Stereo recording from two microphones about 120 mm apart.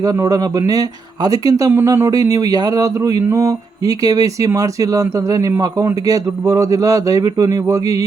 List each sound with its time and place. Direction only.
0.0 s speech: 30° right (ahead or behind)